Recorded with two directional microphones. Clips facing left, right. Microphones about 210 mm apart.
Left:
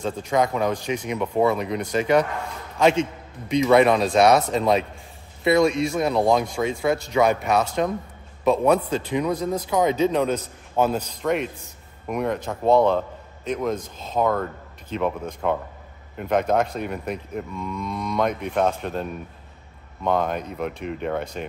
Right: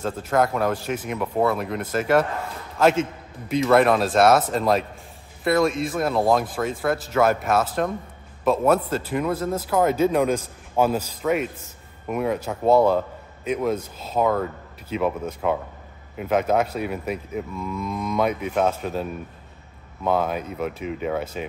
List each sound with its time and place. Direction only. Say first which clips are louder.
0.0 s cattle: even; 5° right (ahead or behind)
8.5 s a man's voice: left 1 dB; 5° right (ahead or behind)
16.2 s cattle: even; 5° right (ahead or behind)